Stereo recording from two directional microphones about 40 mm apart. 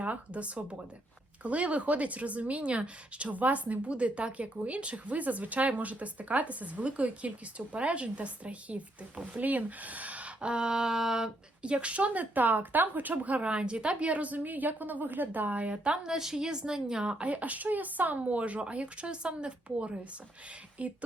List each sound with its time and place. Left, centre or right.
0.0 s a woman's voice: right; by 11.3 s centre
11.6 s a woman's voice: right
13.4 s speech: right
14.1 s speech: right
15.7 s speech: right
16.0 s a woman's voice: centre
16.5 s speech: right
17.2 s speech: right
18.2 s a woman's voice: right